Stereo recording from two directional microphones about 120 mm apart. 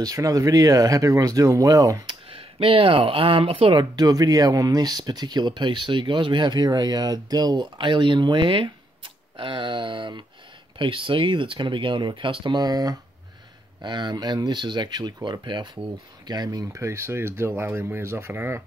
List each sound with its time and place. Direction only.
0.0 s speech: 30° right (ahead or behind)
2.0 s speech: 50° right (ahead or behind)
3.9 s speech: 30° right (ahead or behind)